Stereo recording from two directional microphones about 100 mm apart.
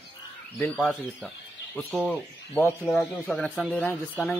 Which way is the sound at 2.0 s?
15° left (ahead or behind).